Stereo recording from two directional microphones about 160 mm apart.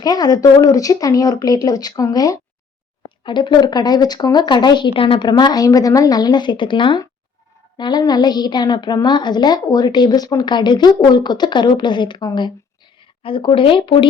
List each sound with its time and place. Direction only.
0.0 s a woman's voice: 25° left (ahead or behind)